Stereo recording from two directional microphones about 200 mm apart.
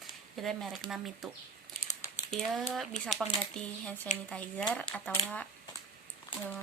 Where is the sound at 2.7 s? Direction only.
Centre (ahead or behind).